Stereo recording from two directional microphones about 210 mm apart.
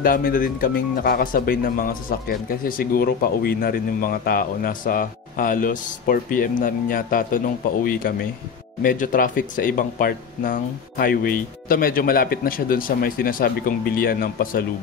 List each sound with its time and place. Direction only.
0.0 s speech: 40° left (ahead or behind)